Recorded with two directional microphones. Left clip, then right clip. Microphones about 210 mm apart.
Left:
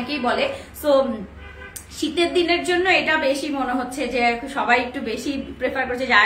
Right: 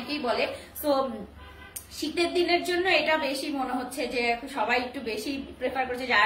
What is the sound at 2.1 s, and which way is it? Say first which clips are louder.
A woman's voice: left 5 dB; 20° left (ahead or behind).